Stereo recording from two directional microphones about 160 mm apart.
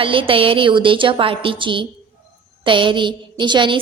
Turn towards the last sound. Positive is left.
turn(degrees=-30)  # may be behind; listen again after turning